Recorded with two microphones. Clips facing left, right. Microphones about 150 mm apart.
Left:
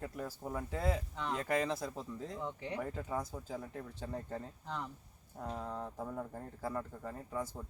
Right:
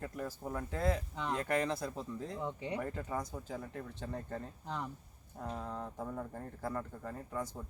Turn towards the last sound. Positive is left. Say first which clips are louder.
# even
turn(degrees=5)  # may be behind; listen again after turning